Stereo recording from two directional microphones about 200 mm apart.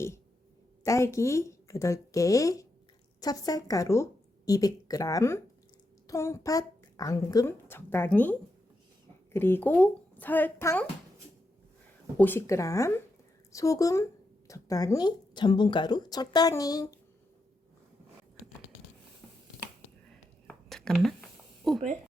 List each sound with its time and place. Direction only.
0.9 s speech: 15° left (ahead or behind)
12.1 s speech: 10° left (ahead or behind)
20.5 s a sound: 5° left (ahead or behind)